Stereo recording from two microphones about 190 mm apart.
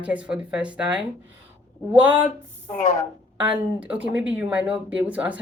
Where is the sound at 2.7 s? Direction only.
40° left (ahead or behind).